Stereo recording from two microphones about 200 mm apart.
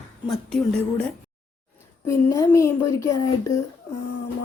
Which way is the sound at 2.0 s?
15° left (ahead or behind).